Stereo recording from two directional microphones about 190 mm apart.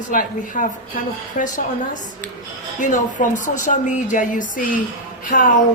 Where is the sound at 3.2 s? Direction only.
45° left (ahead or behind).